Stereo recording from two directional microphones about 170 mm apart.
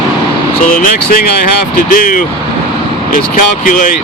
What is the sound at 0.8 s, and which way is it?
Speech, 55° left (ahead or behind).